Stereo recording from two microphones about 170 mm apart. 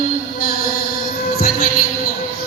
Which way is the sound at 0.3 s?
60° left (ahead or behind).